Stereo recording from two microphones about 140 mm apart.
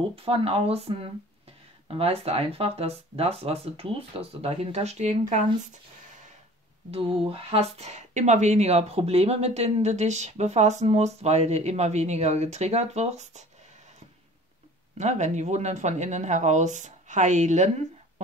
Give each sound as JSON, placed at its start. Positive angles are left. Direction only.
{"t": 0.1, "sound": "speech", "side_deg": -45}
{"t": 6.9, "sound": "speech", "side_deg": -45}
{"t": 15.0, "sound": "speech", "side_deg": -55}